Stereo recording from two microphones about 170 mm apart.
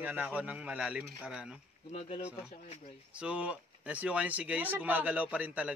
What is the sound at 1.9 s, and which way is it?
Speech, 40° left (ahead or behind).